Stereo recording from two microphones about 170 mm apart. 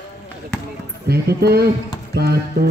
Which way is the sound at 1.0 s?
70° right (ahead or behind).